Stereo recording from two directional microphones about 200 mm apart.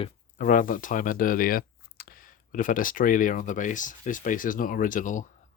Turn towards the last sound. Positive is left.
turn(degrees=40)  # may be behind; listen again after turning